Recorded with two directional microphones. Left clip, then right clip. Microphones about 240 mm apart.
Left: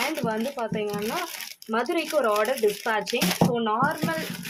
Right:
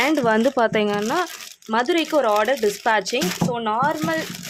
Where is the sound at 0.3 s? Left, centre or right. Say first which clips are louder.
Right 10 dB; right.